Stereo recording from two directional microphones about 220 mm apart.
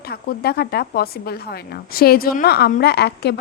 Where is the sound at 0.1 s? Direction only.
45° left (ahead or behind).